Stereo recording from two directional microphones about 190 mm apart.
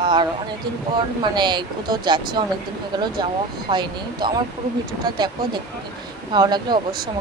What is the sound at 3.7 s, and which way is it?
Speech, 25° right (ahead or behind).